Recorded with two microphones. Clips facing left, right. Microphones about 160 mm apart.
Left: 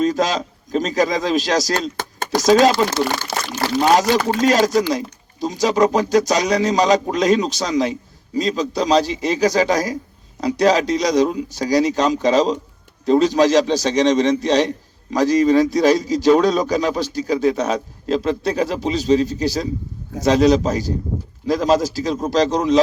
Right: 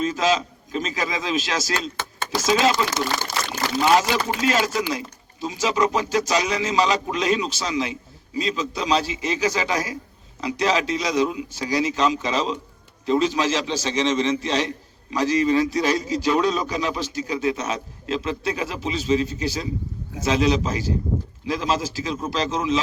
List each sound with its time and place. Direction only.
0.0 s a man's voice: 40° left (ahead or behind)
3.3 s a sound: 65° left (ahead or behind)
3.8 s a man's voice: 45° left (ahead or behind)